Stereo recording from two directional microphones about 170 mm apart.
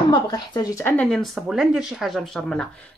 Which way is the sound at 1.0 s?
Centre (ahead or behind).